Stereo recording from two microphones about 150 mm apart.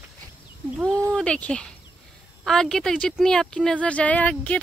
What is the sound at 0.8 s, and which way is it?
Speech, 15° right (ahead or behind).